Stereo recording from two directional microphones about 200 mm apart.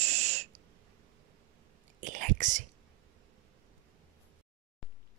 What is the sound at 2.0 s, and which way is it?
Speech, 40° right (ahead or behind).